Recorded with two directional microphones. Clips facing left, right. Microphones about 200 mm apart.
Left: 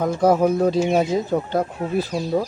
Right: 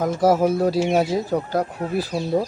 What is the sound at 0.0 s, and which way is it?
Speech, 5° right (ahead or behind).